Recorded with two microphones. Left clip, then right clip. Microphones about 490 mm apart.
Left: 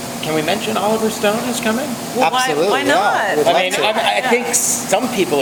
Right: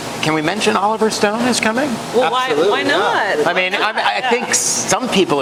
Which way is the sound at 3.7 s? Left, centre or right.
Right.